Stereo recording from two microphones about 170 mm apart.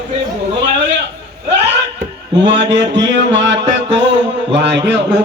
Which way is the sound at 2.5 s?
90° right.